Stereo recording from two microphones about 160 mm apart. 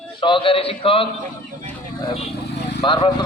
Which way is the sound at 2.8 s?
30° left (ahead or behind).